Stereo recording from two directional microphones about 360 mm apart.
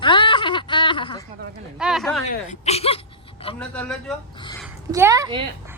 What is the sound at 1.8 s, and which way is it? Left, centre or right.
Speech, centre.